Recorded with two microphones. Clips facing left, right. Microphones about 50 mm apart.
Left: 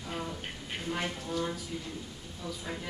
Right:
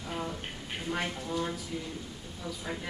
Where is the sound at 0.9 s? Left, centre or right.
Centre.